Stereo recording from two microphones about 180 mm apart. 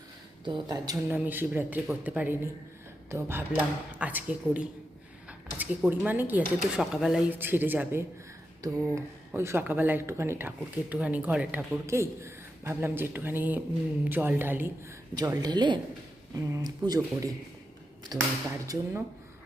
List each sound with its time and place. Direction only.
0.4 s speech: 25° right (ahead or behind)
1.1 s speech: 10° right (ahead or behind)
15.1 s speech: 20° right (ahead or behind)